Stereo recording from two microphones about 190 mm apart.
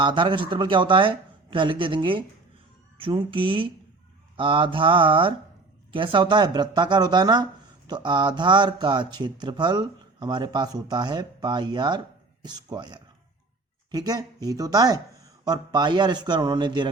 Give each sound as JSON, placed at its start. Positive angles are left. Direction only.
{"t": 0.0, "sound": "speech", "side_deg": -25}